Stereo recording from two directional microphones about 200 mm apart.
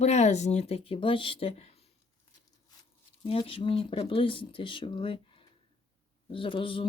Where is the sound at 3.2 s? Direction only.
25° left (ahead or behind).